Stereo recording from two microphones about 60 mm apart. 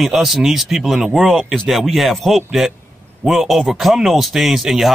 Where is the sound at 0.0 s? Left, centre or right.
Centre.